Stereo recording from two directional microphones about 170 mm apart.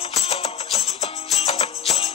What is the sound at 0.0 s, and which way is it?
Music, 35° left (ahead or behind).